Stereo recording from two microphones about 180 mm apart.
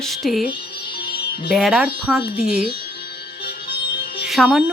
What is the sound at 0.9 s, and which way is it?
Music, 60° left (ahead or behind).